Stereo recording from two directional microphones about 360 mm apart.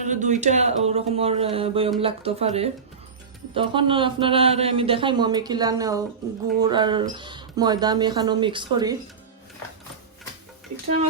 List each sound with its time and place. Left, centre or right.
0.0 s a man's voice: centre